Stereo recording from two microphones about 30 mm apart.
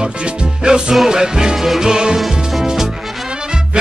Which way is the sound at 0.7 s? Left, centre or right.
Right.